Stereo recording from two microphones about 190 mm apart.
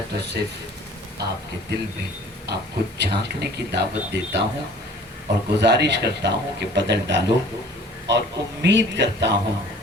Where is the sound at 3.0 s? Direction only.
60° right (ahead or behind).